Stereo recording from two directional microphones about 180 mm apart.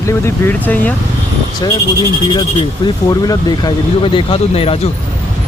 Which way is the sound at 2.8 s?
25° left (ahead or behind).